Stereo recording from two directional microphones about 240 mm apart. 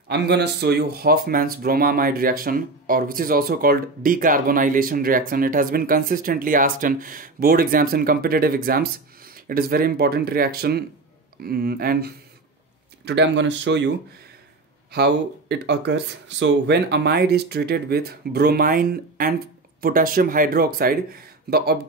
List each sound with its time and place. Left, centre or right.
0.1 s speech: right